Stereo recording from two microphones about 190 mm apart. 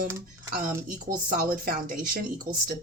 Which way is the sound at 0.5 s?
45° right (ahead or behind).